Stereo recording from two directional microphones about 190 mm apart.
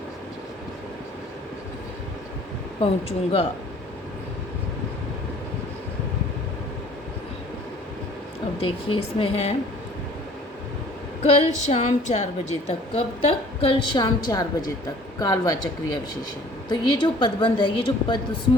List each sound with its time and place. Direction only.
2.8 s a woman's voice: 30° left (ahead or behind)
8.5 s a woman's voice: 30° left (ahead or behind)
11.2 s a woman's voice: 35° left (ahead or behind)